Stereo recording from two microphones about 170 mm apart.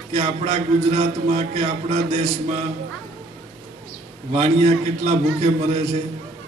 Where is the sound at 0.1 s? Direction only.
40° right (ahead or behind).